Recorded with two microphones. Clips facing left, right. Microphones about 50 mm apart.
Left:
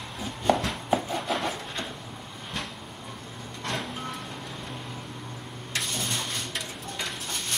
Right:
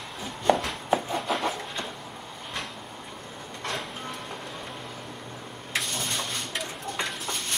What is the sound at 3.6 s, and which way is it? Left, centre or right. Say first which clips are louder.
Music: left 1 dB; centre.